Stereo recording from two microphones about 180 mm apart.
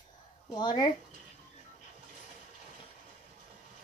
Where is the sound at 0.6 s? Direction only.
25° left (ahead or behind).